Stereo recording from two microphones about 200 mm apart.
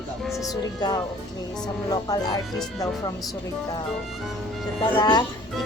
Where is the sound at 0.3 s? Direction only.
Centre (ahead or behind).